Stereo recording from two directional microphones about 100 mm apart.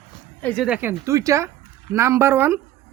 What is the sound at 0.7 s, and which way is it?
Speech, 20° right (ahead or behind).